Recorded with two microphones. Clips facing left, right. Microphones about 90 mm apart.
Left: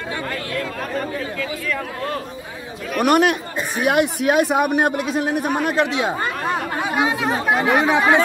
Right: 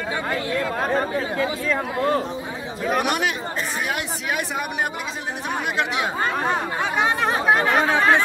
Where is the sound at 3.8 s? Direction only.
60° left (ahead or behind).